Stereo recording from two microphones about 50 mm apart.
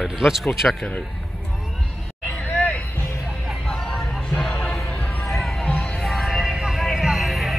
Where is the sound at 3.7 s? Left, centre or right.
Centre.